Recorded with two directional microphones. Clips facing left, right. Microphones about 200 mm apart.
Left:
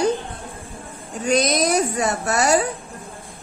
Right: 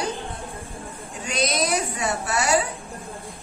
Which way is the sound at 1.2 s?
45° left (ahead or behind).